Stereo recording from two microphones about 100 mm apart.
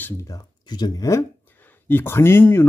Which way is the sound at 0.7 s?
45° left (ahead or behind).